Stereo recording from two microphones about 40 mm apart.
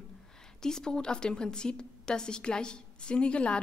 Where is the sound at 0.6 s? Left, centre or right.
Centre.